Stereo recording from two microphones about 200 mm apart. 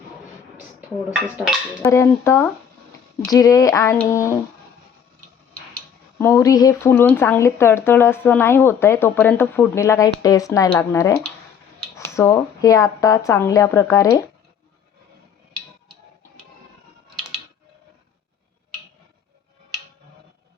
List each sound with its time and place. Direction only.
1.8 s speech: 15° left (ahead or behind)
6.1 s speech: 10° left (ahead or behind)